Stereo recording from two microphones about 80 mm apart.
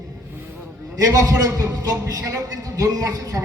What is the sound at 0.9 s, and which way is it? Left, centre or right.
A man's voice, right.